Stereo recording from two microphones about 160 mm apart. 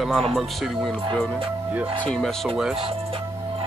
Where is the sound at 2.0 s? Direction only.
5° left (ahead or behind).